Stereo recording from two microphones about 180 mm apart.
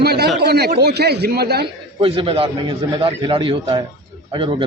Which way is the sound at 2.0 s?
30° right (ahead or behind).